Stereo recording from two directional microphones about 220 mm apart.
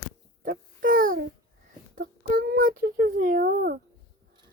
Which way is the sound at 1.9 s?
40° right (ahead or behind).